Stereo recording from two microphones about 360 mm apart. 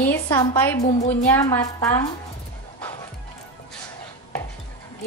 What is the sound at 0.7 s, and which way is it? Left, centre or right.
Speech, centre.